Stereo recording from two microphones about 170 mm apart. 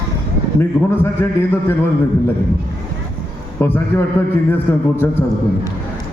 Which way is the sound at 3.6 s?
10° left (ahead or behind).